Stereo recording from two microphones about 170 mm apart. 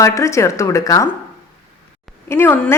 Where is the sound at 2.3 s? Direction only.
15° left (ahead or behind).